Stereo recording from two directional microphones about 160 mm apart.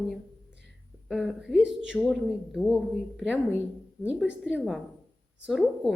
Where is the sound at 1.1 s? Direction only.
5° right (ahead or behind).